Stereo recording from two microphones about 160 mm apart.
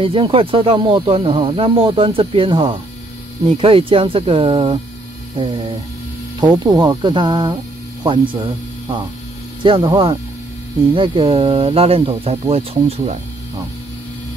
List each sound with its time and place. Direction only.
0.0 s speech: 35° right (ahead or behind)
5.3 s mains hum: 35° right (ahead or behind)
6.4 s speech: 25° right (ahead or behind)